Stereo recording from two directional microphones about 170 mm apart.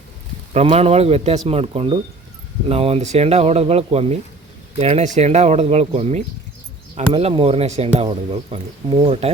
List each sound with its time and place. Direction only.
0.5 s speech: 35° right (ahead or behind)